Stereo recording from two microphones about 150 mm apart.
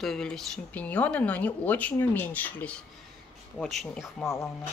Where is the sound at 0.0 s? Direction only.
5° left (ahead or behind).